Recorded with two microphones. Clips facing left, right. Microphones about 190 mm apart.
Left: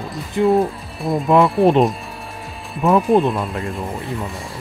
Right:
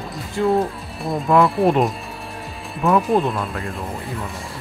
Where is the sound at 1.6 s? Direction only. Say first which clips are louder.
Left 3 dB; 20° left (ahead or behind).